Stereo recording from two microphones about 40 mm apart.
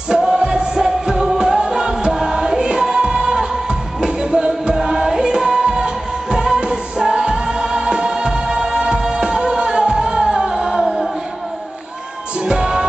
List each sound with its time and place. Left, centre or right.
0.1 s music: centre
12.4 s music: centre